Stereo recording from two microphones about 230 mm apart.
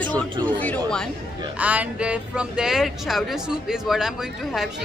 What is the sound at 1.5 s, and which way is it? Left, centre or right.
Speech, centre.